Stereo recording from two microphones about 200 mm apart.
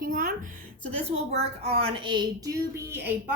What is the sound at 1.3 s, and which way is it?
Speech, 30° right (ahead or behind).